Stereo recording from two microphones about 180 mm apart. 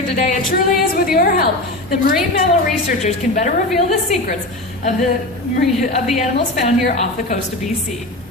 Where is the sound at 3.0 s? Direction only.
45° left (ahead or behind).